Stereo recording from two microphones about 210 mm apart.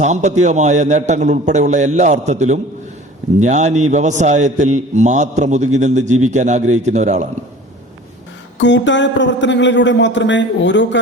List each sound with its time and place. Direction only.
0.0 s a man's voice: 35° right (ahead or behind)
8.5 s a man's voice: 60° left (ahead or behind)